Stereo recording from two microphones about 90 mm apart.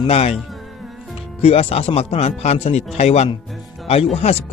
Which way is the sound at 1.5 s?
90° left.